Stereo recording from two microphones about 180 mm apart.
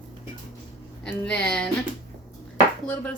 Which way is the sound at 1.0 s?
5° left (ahead or behind).